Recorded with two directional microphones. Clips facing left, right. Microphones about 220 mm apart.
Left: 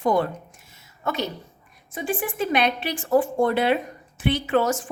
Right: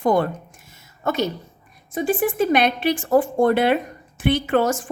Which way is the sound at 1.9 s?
40° right (ahead or behind).